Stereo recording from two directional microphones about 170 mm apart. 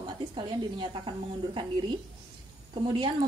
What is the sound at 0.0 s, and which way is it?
A woman's voice, 25° right (ahead or behind).